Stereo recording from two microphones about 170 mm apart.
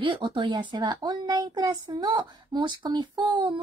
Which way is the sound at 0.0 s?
30° right (ahead or behind).